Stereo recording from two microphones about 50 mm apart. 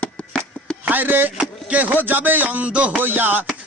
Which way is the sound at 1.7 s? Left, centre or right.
Right.